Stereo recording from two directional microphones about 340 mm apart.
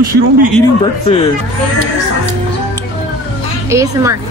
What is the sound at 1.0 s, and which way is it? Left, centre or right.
Speech, centre.